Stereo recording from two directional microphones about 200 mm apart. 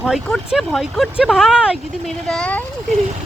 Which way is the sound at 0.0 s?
Centre (ahead or behind).